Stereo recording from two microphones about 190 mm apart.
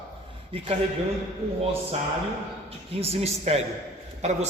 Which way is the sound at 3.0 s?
30° right (ahead or behind).